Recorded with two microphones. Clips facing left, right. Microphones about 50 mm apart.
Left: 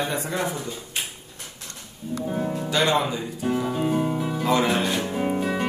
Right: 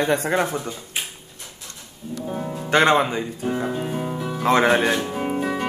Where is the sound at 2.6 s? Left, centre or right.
Right.